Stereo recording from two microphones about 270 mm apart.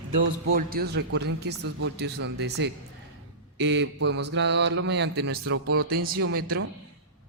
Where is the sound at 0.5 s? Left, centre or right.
Right.